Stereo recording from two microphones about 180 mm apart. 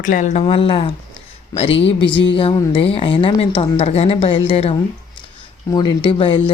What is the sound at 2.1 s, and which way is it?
Speech, 90° left.